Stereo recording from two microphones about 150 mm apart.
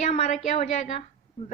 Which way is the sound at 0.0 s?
50° left (ahead or behind).